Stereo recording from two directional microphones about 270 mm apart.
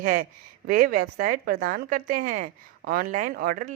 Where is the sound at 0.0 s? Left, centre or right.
Right.